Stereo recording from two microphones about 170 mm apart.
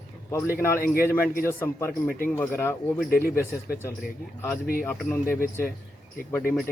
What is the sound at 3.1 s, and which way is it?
Speech, 60° left (ahead or behind).